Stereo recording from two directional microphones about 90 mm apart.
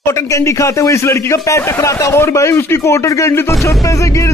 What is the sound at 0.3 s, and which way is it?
A man's voice, 35° left (ahead or behind).